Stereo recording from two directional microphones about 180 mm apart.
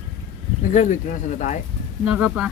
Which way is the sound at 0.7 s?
45° left (ahead or behind).